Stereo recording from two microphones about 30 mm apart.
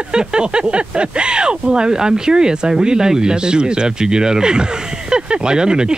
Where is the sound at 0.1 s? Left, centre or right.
Right.